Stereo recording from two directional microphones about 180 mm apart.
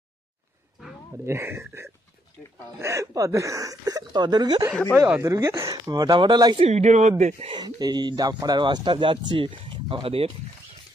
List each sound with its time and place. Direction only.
1.2 s speech: 15° right (ahead or behind)
6.7 s speech: 40° right (ahead or behind)
7.5 s speech: 25° right (ahead or behind)